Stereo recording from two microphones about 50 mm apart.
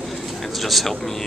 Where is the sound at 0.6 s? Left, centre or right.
Centre.